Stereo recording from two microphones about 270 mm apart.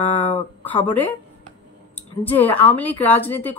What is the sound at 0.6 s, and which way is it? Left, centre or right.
Speech, centre.